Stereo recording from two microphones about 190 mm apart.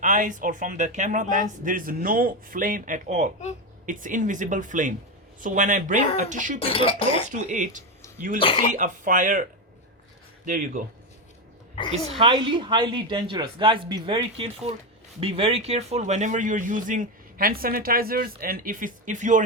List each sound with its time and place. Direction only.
0.0 s a man's voice: 40° right (ahead or behind)
6.6 s speech: 30° left (ahead or behind)
7.3 s speech: 40° right (ahead or behind)
8.4 s speech: 30° left (ahead or behind)
8.7 s a man's voice: 45° right (ahead or behind)
12.0 s a woman's voice: 30° right (ahead or behind)